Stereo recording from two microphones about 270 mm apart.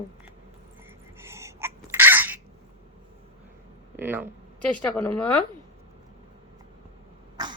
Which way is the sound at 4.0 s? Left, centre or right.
Centre.